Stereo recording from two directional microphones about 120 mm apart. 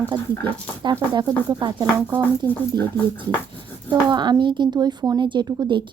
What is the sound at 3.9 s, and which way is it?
Speech, 40° right (ahead or behind).